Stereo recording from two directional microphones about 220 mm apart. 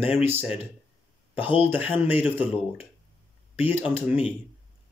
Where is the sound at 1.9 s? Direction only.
10° right (ahead or behind).